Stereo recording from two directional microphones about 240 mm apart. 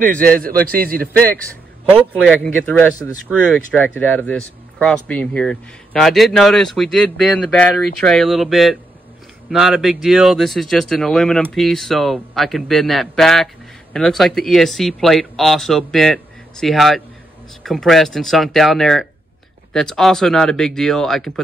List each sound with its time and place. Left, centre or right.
0.0 s speech: right
1.9 s speech: centre